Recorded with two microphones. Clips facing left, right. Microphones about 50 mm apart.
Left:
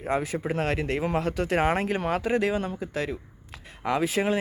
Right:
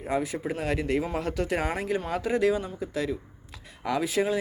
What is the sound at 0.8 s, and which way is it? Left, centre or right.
Speech, left.